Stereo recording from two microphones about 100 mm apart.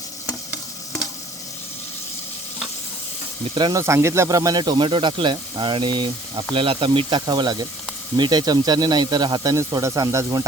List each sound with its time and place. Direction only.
3.5 s speech: 50° right (ahead or behind)
3.8 s speech: 30° right (ahead or behind)